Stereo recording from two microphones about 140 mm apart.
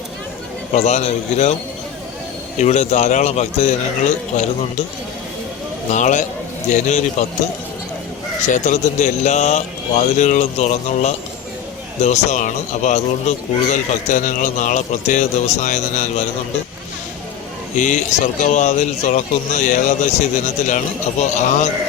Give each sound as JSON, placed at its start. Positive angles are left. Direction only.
{"t": 0.7, "sound": "speech", "side_deg": 55}
{"t": 2.6, "sound": "speech", "side_deg": 55}
{"t": 5.9, "sound": "speech", "side_deg": 60}
{"t": 8.4, "sound": "speech", "side_deg": 60}
{"t": 17.7, "sound": "speech", "side_deg": 65}